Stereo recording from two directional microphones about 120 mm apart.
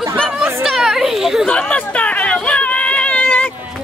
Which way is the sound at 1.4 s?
10° left (ahead or behind).